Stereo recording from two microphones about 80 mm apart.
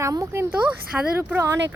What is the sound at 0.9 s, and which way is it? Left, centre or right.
Speech, centre.